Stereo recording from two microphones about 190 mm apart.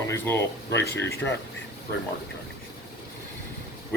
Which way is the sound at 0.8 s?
55° left (ahead or behind).